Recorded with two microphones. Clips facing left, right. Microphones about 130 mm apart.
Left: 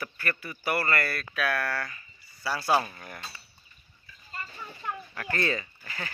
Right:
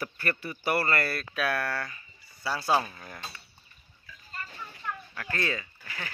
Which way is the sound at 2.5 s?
5° left (ahead or behind).